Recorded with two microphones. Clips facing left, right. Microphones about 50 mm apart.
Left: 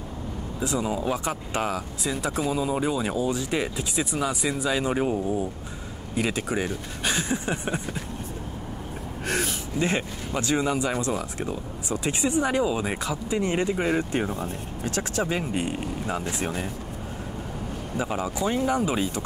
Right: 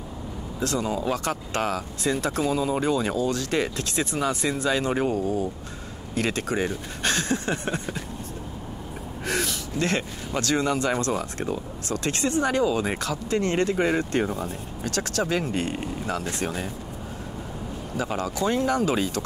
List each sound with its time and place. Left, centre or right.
0.6 s speech: centre
5.1 s speech: left
6.1 s speech: centre
9.3 s gasp: centre
10.4 s speech: centre
14.4 s speech: left
17.9 s speech: centre